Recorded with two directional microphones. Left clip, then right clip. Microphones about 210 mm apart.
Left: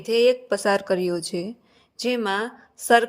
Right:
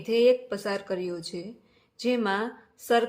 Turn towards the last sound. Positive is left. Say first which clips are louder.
# left 6 dB
turn(degrees=35)  # may be behind; listen again after turning